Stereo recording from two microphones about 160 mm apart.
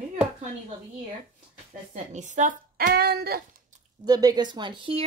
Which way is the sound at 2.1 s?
50° right (ahead or behind).